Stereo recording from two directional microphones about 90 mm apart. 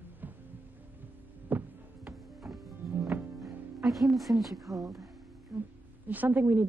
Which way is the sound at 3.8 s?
Centre (ahead or behind).